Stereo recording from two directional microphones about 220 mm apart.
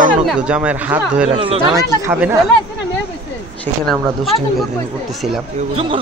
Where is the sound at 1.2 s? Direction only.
25° right (ahead or behind).